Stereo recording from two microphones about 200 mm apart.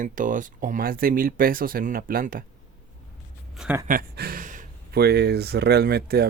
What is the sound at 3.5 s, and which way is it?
Speech, 5° right (ahead or behind).